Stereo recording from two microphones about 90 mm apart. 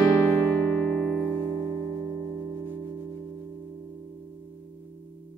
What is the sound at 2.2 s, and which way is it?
Music, 40° right (ahead or behind).